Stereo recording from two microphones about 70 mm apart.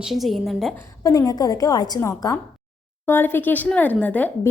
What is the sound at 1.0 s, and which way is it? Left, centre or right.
Speech, left.